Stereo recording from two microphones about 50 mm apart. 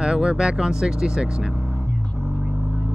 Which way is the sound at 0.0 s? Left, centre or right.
Centre.